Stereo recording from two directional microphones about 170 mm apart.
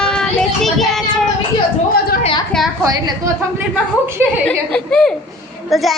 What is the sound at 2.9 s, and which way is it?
Speech, 20° right (ahead or behind).